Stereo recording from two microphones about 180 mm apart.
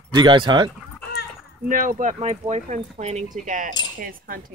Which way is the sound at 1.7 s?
50° right (ahead or behind).